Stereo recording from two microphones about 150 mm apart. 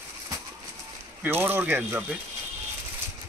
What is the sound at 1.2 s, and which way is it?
Speech, 15° right (ahead or behind).